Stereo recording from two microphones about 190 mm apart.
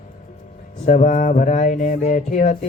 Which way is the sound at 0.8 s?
40° left (ahead or behind).